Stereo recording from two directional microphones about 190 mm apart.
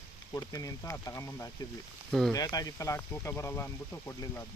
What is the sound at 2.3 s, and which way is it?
Speech, 20° left (ahead or behind).